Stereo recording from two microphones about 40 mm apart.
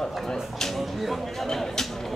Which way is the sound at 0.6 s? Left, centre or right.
Centre.